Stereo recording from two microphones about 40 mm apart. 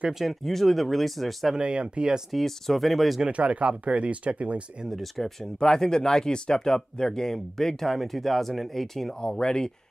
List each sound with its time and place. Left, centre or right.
0.2 s speech: centre
1.6 s speech: right
2.3 s speech: centre
3.3 s speech: right
5.6 s speech: centre
9.2 s speech: centre